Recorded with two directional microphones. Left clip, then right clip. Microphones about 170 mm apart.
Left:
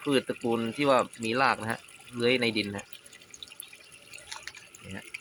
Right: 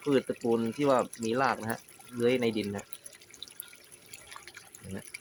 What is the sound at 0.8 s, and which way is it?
Speech, 5° right (ahead or behind).